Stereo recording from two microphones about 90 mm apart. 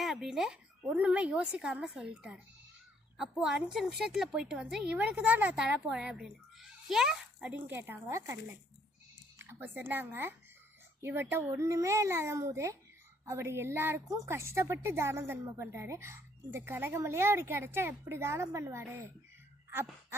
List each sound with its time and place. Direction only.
0.0 s a woman's voice: centre (ahead or behind)
7.5 s a woman's voice: 20° right (ahead or behind)
9.4 s a woman's voice: 25° right (ahead or behind)
19.7 s a sound: 30° right (ahead or behind)